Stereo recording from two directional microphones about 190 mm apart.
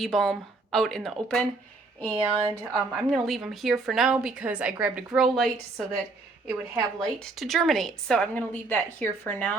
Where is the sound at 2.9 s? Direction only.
Centre (ahead or behind).